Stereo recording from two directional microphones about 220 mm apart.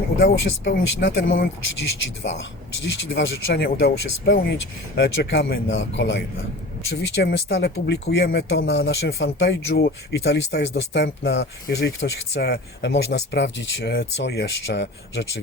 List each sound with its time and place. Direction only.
0.2 s speech: 50° left (ahead or behind)